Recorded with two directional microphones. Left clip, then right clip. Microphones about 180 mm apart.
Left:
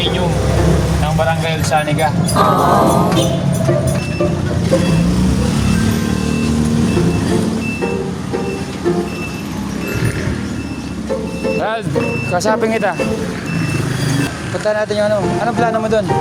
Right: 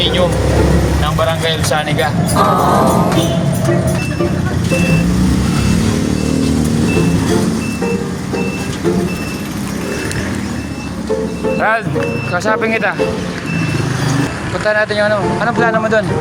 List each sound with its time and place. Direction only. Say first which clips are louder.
1.5 s speech: right 1 dB; centre (ahead or behind)
12.3 s speech: even; 20° left (ahead or behind)
14.7 s speech: right 2 dB; 25° left (ahead or behind)